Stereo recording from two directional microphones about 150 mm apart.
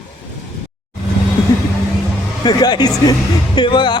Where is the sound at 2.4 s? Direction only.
30° left (ahead or behind).